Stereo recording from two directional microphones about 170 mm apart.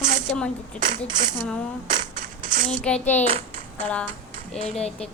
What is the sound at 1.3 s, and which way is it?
Speech, 5° right (ahead or behind).